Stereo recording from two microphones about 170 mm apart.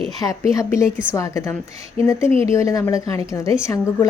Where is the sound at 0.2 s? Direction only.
20° left (ahead or behind).